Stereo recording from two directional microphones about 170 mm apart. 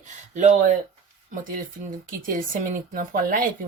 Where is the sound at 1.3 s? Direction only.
55° right (ahead or behind).